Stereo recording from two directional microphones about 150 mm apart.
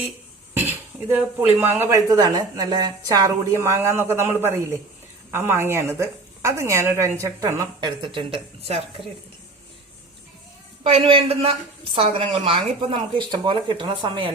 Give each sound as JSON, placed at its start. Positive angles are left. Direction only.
{"t": 0.5, "sound": "dishes", "side_deg": -15}
{"t": 1.5, "sound": "a woman's voice", "side_deg": -15}
{"t": 7.8, "sound": "speech", "side_deg": -30}
{"t": 10.8, "sound": "speech", "side_deg": -40}